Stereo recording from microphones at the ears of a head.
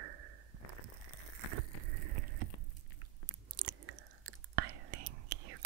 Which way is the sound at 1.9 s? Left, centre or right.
Right.